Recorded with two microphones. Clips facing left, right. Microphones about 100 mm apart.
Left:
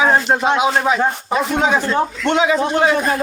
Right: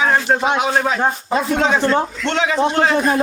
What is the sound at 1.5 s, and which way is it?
A man's voice, 10° left (ahead or behind).